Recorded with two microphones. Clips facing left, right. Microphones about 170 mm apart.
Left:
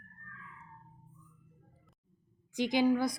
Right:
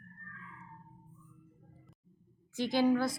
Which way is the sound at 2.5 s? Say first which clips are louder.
Even; 15° left (ahead or behind).